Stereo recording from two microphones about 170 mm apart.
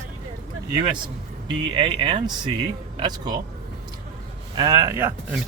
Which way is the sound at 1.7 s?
30° right (ahead or behind).